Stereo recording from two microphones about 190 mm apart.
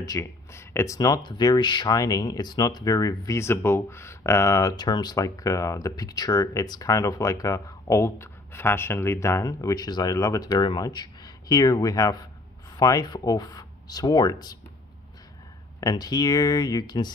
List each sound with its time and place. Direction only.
0.0 s speech: 15° left (ahead or behind)
15.8 s speech: 20° left (ahead or behind)